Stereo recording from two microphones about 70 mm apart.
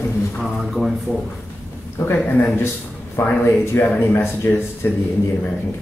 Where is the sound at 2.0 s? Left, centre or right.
Left.